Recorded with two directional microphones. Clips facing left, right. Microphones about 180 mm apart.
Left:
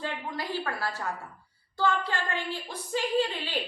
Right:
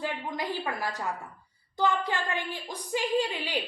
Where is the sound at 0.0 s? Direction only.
20° right (ahead or behind).